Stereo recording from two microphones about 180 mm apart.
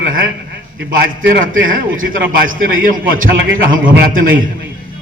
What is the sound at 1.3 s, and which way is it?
A man's voice, 50° right (ahead or behind).